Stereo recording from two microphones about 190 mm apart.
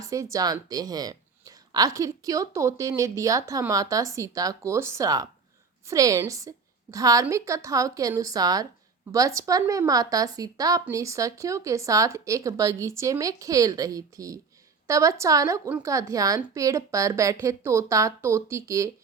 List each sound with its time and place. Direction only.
0.0 s speech: 15° right (ahead or behind)